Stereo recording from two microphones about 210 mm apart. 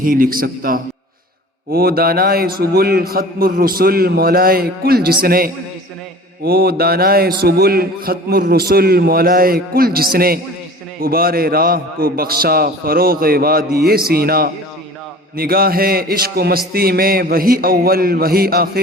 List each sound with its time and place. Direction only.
0.0 s a man's voice: 40° right (ahead or behind)